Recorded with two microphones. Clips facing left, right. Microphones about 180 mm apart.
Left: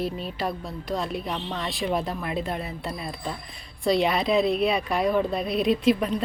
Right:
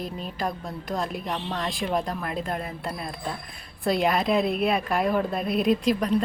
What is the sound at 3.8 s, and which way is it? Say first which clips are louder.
Speech: left 1 dB; centre (ahead or behind).